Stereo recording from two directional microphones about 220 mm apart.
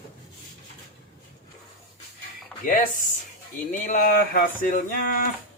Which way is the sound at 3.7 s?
40° left (ahead or behind).